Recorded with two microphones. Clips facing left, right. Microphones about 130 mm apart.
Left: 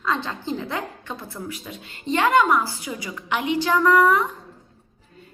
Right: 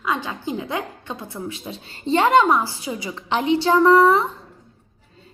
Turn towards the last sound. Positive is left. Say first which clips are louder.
# right 3 dB
turn(degrees=-30)  # may be behind; listen again after turning